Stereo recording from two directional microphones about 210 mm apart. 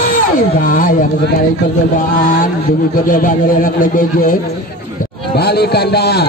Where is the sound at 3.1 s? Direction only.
40° left (ahead or behind).